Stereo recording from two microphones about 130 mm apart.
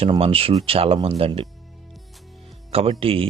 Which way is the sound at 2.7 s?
45° right (ahead or behind).